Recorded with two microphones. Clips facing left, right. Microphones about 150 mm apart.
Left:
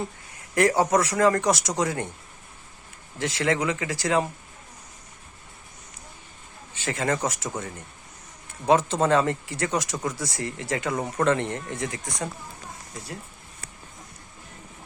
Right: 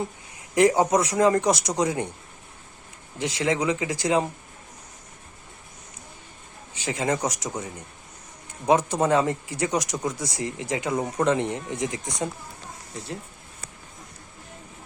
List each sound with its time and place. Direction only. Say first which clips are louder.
0.5 s speech: right 2 dB; 20° right (ahead or behind)
3.2 s speech: even; 15° right (ahead or behind)
6.7 s speech: right 1 dB; 15° right (ahead or behind)